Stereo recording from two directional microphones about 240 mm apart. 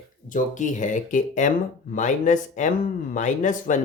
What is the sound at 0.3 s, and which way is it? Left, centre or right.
Speech, left.